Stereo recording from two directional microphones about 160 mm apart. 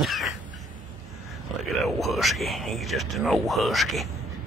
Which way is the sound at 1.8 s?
Centre (ahead or behind).